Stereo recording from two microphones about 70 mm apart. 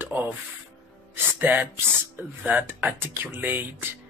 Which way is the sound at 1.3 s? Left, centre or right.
Right.